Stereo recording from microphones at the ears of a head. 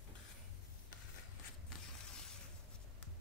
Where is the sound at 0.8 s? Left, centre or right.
Left.